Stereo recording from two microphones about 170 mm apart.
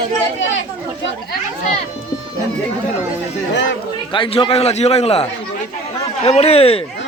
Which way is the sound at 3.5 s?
90° left.